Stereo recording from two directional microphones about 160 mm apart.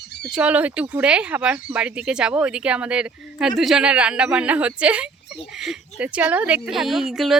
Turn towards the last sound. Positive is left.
turn(degrees=0)  # may be behind; listen again after turning